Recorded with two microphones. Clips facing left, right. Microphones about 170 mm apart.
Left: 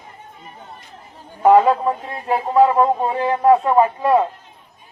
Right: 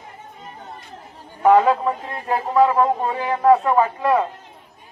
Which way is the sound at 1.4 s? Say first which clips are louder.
Left 2 dB; 10° left (ahead or behind).